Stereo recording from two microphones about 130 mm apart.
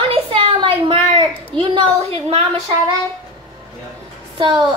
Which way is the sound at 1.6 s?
45° right (ahead or behind).